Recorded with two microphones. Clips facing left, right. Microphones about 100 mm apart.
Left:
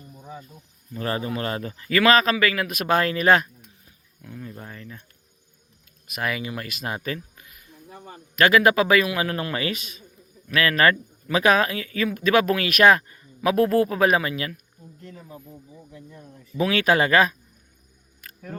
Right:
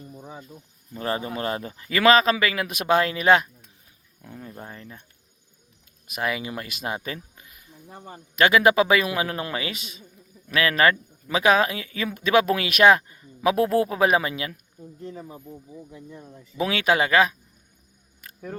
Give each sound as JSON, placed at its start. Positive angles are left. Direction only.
{"t": 0.9, "sound": "speech", "side_deg": -20}
{"t": 6.1, "sound": "speech", "side_deg": -20}